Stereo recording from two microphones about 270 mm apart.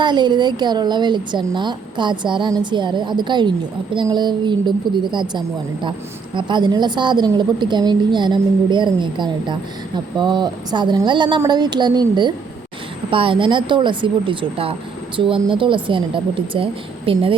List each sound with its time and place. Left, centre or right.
0.0 s speech: centre